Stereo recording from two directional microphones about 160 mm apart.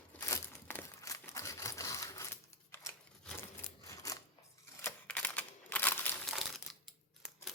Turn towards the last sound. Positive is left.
turn(degrees=0)  # may be behind; listen again after turning